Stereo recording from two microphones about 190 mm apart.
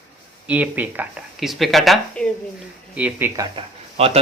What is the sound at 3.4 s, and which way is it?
Speech, 30° right (ahead or behind).